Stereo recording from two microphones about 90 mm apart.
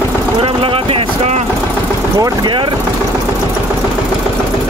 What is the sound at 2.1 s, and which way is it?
Speech, 45° right (ahead or behind).